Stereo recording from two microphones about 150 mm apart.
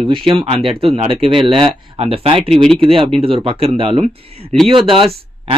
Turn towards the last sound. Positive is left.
turn(degrees=-35)  # may be behind; listen again after turning